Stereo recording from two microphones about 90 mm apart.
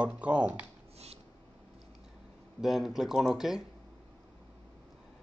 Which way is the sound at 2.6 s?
5° right (ahead or behind).